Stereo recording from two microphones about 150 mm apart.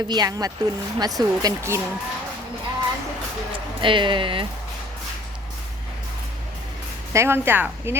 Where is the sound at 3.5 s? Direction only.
35° right (ahead or behind).